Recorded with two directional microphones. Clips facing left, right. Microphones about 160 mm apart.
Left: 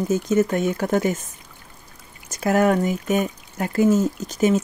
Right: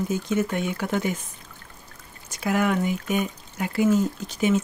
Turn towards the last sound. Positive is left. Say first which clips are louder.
# left 3 dB
turn(degrees=40)  # may be behind; listen again after turning